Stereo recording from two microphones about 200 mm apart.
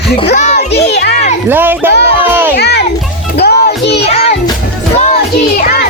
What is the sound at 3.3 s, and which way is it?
Music, 55° left (ahead or behind).